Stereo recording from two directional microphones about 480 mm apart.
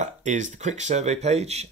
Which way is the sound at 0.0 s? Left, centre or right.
Centre.